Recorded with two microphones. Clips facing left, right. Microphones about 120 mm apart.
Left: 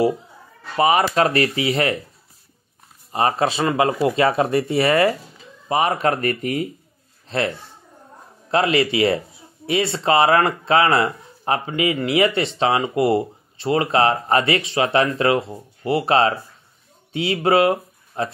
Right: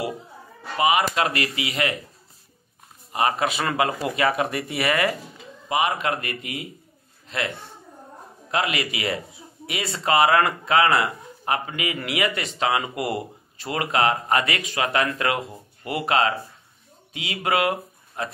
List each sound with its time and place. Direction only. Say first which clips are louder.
0.7 s speech: left 4 dB; 35° left (ahead or behind)
3.1 s speech: left 3 dB; 35° left (ahead or behind)